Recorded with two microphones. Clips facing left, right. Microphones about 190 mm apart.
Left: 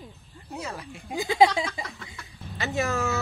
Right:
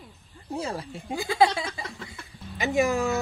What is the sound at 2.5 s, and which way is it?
Speech, 15° right (ahead or behind).